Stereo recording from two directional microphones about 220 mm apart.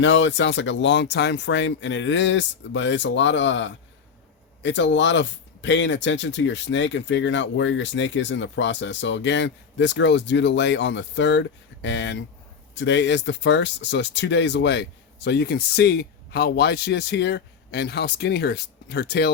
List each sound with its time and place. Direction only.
0.0 s speech: 55° left (ahead or behind)